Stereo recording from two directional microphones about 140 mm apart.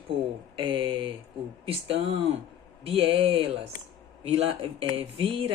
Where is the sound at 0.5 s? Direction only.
35° right (ahead or behind).